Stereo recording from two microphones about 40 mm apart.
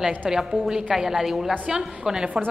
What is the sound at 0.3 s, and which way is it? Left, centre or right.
A woman's voice, centre.